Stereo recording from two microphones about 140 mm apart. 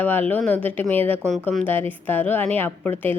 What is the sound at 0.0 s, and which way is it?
Speech, 15° left (ahead or behind).